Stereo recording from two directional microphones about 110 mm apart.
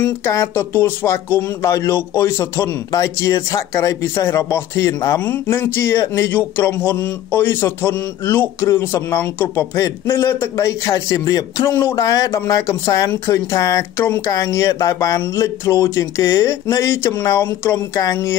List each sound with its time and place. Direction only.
0.0 s speech: 25° left (ahead or behind)